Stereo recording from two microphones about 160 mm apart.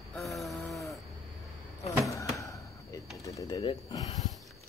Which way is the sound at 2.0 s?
20° left (ahead or behind).